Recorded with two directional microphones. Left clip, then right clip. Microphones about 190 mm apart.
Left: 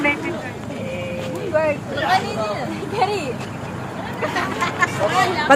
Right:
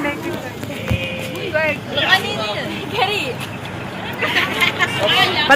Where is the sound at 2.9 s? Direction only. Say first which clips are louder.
Right 2 dB; 55° left (ahead or behind).